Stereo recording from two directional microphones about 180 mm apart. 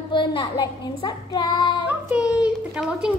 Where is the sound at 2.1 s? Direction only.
5° right (ahead or behind).